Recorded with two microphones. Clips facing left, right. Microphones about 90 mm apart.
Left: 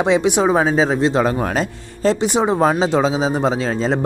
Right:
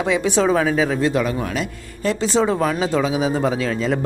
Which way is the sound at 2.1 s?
20° left (ahead or behind).